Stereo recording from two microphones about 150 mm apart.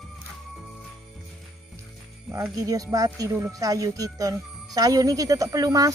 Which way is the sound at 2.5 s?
25° right (ahead or behind).